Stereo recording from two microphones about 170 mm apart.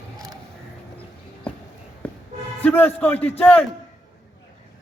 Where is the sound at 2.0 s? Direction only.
5° left (ahead or behind).